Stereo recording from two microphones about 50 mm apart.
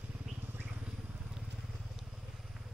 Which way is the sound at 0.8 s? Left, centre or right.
Right.